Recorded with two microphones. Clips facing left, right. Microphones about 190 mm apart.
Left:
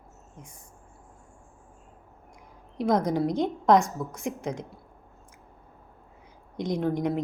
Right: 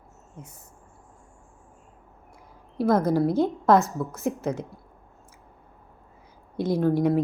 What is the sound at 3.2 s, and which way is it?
Speech, 15° left (ahead or behind).